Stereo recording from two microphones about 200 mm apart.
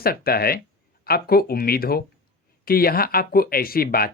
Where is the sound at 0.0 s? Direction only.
50° left (ahead or behind).